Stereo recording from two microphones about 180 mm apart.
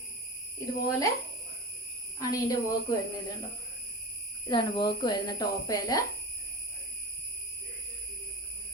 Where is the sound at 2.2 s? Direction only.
20° left (ahead or behind).